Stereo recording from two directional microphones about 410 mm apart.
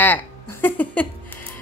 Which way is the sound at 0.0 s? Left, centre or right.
Centre.